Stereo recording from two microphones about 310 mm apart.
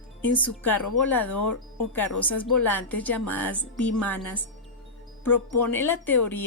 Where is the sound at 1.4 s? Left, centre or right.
Left.